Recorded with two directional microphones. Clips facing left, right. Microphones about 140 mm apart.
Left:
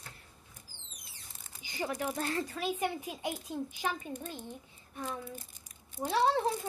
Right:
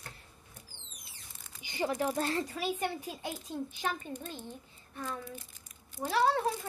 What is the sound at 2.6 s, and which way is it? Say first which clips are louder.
Speech: left 3 dB; centre (ahead or behind).